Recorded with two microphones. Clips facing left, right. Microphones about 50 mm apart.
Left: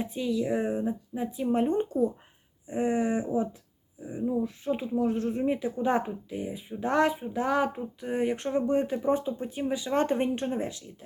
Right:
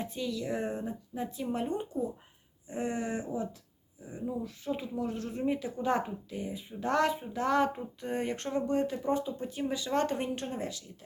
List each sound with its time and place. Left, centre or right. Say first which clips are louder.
0.0 s speech: left 6 dB; centre
1.5 s speech: left 10 dB; left
2.6 s speech: left 7 dB; left